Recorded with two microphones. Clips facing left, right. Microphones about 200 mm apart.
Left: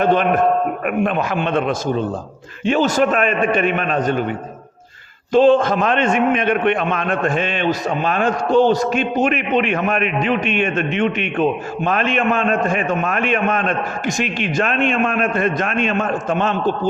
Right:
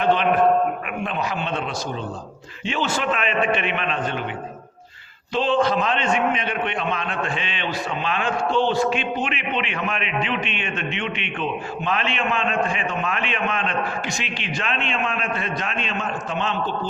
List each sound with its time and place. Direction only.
0.0 s a man's voice: 45° left (ahead or behind)
5.3 s a man's voice: 45° left (ahead or behind)